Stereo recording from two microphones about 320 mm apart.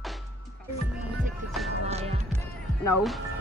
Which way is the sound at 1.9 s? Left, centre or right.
Centre.